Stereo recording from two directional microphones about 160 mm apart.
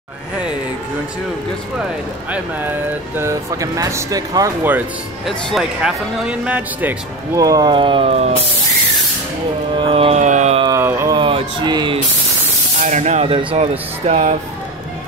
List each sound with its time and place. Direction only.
3.2 s speech: 20° right (ahead or behind)
5.5 s speech: 5° right (ahead or behind)
7.4 s speech: 25° right (ahead or behind)
9.8 s speech: 35° right (ahead or behind)
10.6 s a sound: 20° right (ahead or behind)
11.1 s a sound: 30° right (ahead or behind)
12.8 s speech: 45° right (ahead or behind)